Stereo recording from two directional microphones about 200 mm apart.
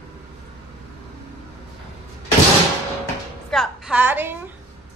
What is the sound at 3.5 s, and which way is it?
Speech, 5° right (ahead or behind).